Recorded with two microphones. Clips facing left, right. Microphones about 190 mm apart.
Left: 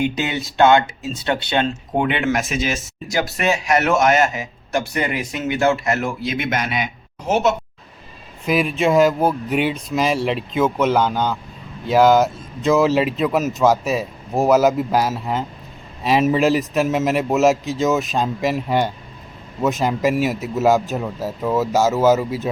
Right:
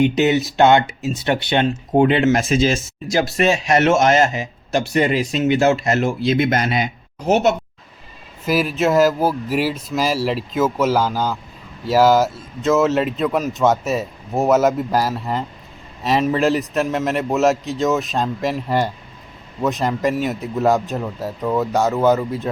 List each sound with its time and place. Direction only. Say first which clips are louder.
0.0 s speech: right 6 dB; 20° right (ahead or behind)
2.0 s speech: right 5 dB; 35° right (ahead or behind)
8.4 s speech: even; 5° right (ahead or behind)